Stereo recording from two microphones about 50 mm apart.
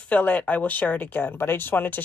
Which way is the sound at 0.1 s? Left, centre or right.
Left.